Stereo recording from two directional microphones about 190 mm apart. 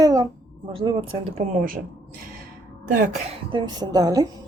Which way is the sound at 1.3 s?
50° right (ahead or behind).